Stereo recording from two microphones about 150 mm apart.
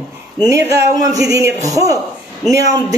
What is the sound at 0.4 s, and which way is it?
Speech, 20° right (ahead or behind).